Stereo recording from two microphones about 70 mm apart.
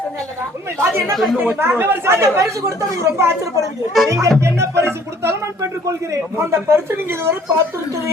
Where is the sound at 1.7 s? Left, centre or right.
Right.